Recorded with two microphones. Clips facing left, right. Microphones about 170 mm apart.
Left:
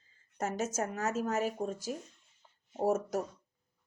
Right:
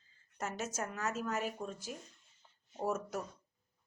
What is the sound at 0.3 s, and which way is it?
Speech, 45° left (ahead or behind).